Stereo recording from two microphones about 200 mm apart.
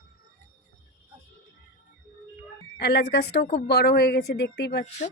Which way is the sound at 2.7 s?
55° left (ahead or behind).